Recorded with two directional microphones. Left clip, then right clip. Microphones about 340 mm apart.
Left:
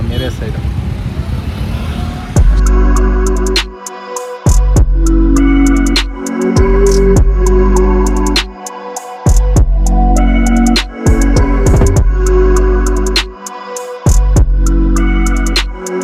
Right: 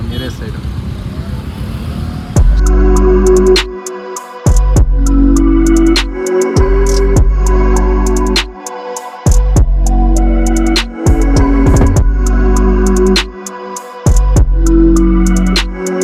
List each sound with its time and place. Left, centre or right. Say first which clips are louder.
2.3 s music: right 1 dB; centre